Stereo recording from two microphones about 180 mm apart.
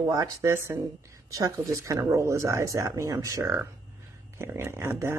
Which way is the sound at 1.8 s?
15° right (ahead or behind).